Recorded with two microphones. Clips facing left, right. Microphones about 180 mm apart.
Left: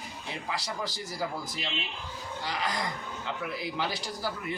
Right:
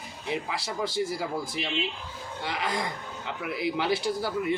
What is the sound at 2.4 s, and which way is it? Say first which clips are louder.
Speech: right 2 dB; 25° right (ahead or behind).